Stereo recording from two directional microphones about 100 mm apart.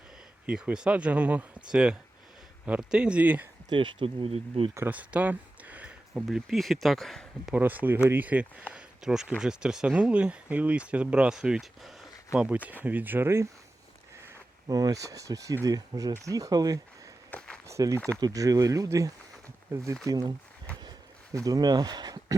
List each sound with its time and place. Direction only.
0.4 s speech: 10° right (ahead or behind)
3.7 s speech: 50° right (ahead or behind); by 4.7 s 75° right (ahead or behind)
4.9 s a sound: 15° right (ahead or behind)
6.2 s speech: centre (ahead or behind)
7.5 s speech: 15° right (ahead or behind)
8.7 s a sound: 5° right (ahead or behind)
9.4 s speech: 5° right (ahead or behind)
12.3 s speech: 15° right (ahead or behind)
14.7 s speech: 40° right (ahead or behind)
17.3 s walk: 10° left (ahead or behind)
17.7 s speech: 30° right (ahead or behind)
21.3 s speech: 35° right (ahead or behind)